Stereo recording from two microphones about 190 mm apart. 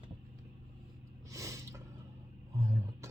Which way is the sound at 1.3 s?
15° right (ahead or behind).